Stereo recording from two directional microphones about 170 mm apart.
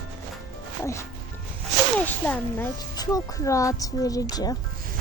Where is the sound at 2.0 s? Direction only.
10° left (ahead or behind).